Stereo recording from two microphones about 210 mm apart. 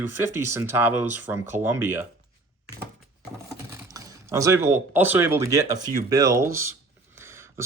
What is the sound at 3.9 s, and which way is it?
Speech, 15° right (ahead or behind).